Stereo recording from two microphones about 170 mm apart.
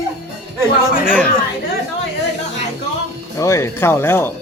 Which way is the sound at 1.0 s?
5° left (ahead or behind).